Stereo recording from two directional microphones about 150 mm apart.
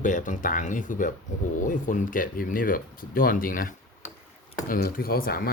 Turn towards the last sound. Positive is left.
turn(degrees=80)